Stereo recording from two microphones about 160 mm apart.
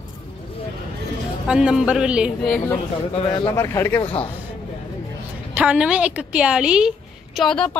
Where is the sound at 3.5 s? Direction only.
15° left (ahead or behind).